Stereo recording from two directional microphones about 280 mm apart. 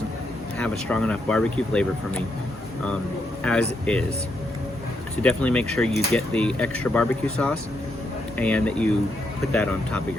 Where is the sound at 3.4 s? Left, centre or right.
Centre.